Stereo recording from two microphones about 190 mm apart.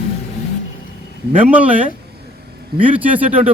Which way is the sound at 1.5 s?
10° right (ahead or behind).